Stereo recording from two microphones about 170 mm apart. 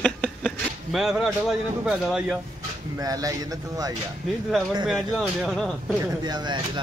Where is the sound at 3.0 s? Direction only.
20° right (ahead or behind).